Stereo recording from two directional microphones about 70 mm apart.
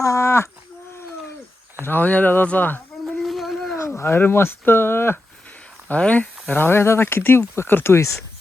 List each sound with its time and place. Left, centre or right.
0.0 s livestock: left
1.8 s speech: left
3.1 s a sound: centre
3.8 s speech: left
5.9 s speech: left
6.5 s speech: left